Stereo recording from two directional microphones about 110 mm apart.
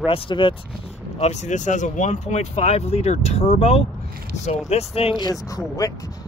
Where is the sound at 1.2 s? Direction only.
90° left; by 5.2 s 65° left (ahead or behind).